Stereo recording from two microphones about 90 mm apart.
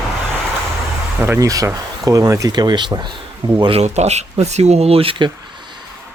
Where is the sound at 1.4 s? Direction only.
40° right (ahead or behind).